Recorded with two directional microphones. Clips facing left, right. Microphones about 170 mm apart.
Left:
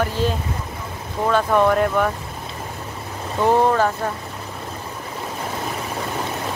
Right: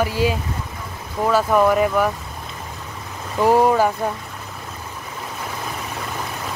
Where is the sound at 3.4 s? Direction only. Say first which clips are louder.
Right 2 dB; 10° right (ahead or behind).